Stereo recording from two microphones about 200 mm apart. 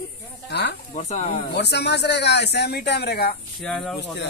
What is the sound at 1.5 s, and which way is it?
Speech, 55° left (ahead or behind).